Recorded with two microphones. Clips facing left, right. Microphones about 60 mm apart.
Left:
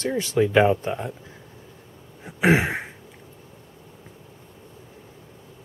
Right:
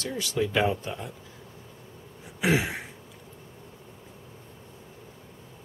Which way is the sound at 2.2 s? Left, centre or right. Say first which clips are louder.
Left 6 dB; left.